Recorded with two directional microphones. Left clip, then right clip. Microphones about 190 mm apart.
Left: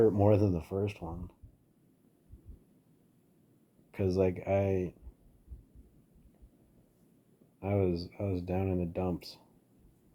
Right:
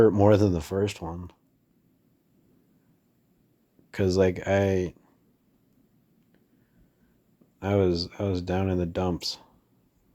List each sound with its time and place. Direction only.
0.0 s speech: 45° right (ahead or behind)
3.9 s speech: 45° right (ahead or behind)
7.6 s speech: 45° right (ahead or behind)